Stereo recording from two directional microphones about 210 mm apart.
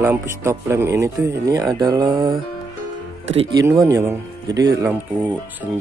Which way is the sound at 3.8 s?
15° right (ahead or behind).